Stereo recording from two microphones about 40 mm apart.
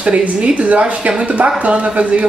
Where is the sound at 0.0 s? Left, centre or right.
Right.